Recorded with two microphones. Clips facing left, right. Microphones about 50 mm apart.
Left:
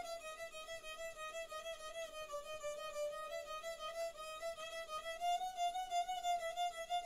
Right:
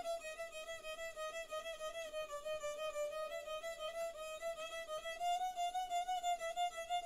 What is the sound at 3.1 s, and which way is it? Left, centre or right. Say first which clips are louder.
Music: right 1 dB; centre.